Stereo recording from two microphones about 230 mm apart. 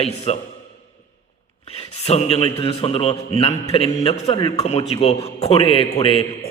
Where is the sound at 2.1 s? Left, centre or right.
Left.